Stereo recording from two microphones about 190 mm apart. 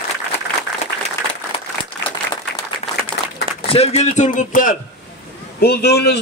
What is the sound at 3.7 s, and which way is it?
A man's voice, 35° left (ahead or behind).